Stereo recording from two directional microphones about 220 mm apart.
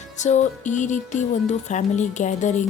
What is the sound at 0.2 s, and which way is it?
Speech, 30° left (ahead or behind).